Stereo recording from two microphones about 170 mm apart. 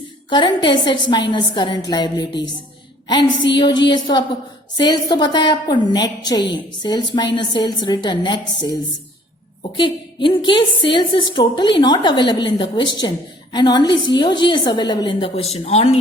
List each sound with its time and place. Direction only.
0.3 s a woman's voice: 25° left (ahead or behind)
9.7 s a woman's voice: 30° left (ahead or behind)